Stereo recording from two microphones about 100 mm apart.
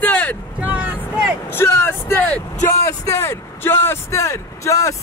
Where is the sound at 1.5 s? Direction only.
25° left (ahead or behind).